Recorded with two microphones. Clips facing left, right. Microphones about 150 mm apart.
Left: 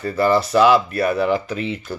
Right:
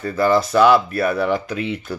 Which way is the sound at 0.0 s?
5° left (ahead or behind).